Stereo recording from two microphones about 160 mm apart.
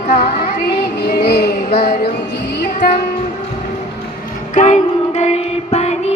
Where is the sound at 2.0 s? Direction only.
85° left.